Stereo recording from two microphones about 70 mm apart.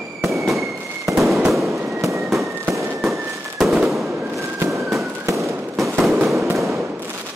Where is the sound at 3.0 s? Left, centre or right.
Centre.